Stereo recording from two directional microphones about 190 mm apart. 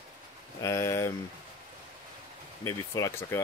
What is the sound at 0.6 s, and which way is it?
Speech, 15° left (ahead or behind).